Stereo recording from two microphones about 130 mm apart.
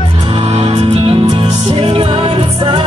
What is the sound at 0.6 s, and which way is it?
Music, 45° right (ahead or behind).